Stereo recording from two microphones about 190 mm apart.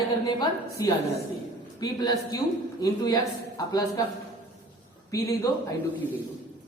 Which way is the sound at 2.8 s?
20° left (ahead or behind).